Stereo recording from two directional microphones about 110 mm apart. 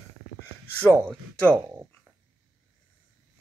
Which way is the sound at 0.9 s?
5° left (ahead or behind).